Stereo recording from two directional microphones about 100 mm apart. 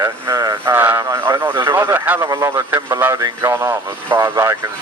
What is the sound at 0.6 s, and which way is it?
Speech, 20° right (ahead or behind).